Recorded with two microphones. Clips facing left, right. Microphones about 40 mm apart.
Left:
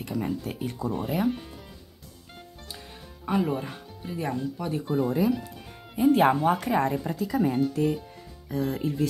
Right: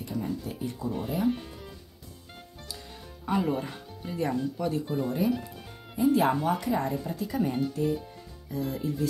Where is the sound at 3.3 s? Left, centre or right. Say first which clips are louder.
Left 1 dB; centre.